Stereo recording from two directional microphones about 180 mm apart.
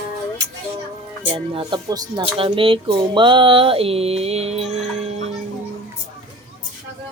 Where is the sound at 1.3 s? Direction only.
30° right (ahead or behind).